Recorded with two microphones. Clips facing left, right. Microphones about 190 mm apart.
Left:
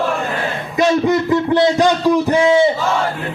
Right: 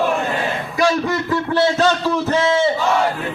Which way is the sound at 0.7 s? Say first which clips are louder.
Left 5 dB; 20° left (ahead or behind).